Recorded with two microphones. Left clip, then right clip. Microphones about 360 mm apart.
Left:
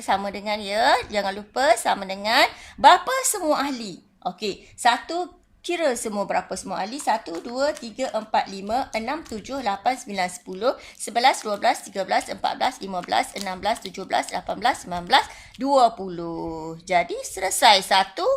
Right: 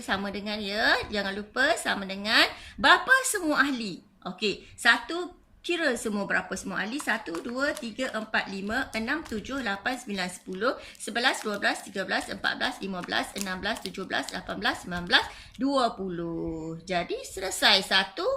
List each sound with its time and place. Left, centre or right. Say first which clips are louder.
0.0 s speech: left 7 dB; centre
16.9 s speech: left 8 dB; centre